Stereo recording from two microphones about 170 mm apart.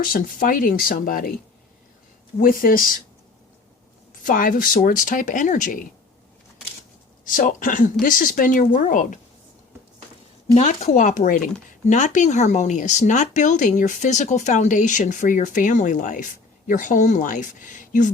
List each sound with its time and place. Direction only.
0.0 s speech: 55° left (ahead or behind)
2.4 s speech: 55° left (ahead or behind)
4.1 s speech: 55° left (ahead or behind)
7.3 s speech: 50° left (ahead or behind)
10.5 s speech: 45° left (ahead or behind)